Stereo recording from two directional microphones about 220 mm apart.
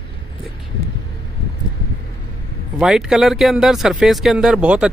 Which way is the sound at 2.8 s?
Centre (ahead or behind).